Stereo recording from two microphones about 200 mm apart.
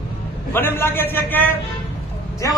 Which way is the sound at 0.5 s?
10° left (ahead or behind).